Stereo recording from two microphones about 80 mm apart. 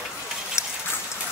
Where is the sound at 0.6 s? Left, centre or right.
Left.